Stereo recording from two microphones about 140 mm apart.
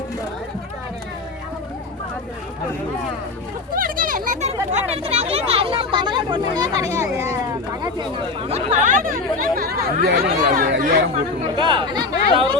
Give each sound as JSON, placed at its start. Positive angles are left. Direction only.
{"t": 3.8, "sound": "a sound", "side_deg": -90}
{"t": 4.7, "sound": "chatter", "side_deg": -50}
{"t": 8.4, "sound": "chatter", "side_deg": -45}
{"t": 11.5, "sound": "chatter", "side_deg": -35}